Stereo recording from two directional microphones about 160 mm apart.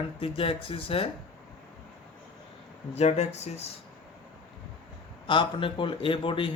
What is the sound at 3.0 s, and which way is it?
Speech, 40° left (ahead or behind).